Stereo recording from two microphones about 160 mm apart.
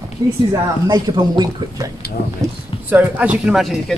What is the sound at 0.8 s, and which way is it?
Speech, 25° right (ahead or behind).